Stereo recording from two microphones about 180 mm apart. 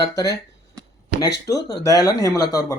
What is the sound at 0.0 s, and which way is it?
Speech, 20° left (ahead or behind).